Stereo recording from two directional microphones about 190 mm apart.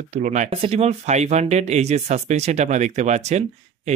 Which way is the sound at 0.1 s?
40° right (ahead or behind).